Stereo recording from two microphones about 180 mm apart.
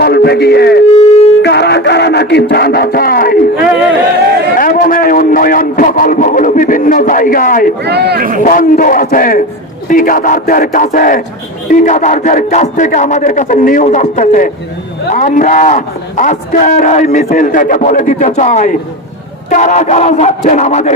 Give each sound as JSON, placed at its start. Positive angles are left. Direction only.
{"t": 0.0, "sound": "speech", "side_deg": 60}
{"t": 1.4, "sound": "music", "side_deg": 70}
{"t": 4.5, "sound": "a sound", "side_deg": 50}
{"t": 7.9, "sound": "speech", "side_deg": -65}
{"t": 8.4, "sound": "a man's voice", "side_deg": 50}